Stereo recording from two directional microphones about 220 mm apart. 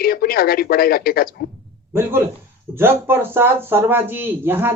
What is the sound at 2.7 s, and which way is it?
A man's voice, 10° right (ahead or behind).